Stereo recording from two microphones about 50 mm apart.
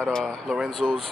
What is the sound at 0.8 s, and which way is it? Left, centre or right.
Speech, centre.